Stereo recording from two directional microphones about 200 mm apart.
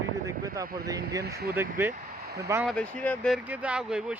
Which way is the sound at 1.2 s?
50° right (ahead or behind).